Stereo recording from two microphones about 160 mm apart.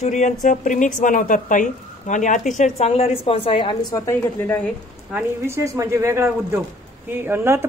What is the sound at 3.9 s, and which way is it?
Speech, 20° left (ahead or behind).